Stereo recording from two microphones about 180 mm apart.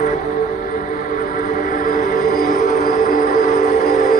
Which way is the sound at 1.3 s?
50° left (ahead or behind).